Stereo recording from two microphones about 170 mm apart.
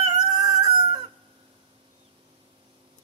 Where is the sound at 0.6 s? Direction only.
35° right (ahead or behind).